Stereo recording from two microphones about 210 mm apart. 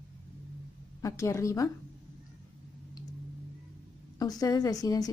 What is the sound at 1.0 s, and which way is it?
Speech, 15° left (ahead or behind).